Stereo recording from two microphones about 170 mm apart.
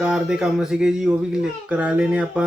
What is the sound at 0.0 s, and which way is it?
A child's voice, 5° right (ahead or behind).